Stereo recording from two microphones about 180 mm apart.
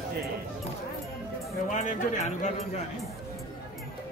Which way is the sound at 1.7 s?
45° left (ahead or behind).